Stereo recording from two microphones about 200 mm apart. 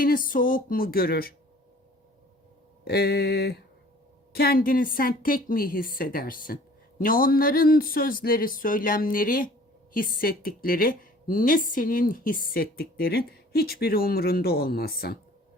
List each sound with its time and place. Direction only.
0.0 s a woman's voice: 45° left (ahead or behind)
2.8 s a woman's voice: 55° left (ahead or behind)